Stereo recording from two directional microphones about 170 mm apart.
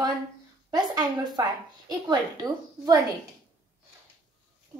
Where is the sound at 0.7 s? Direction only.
25° right (ahead or behind).